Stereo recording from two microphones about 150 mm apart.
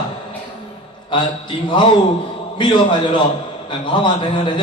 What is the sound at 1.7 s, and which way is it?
A man's voice, 35° left (ahead or behind).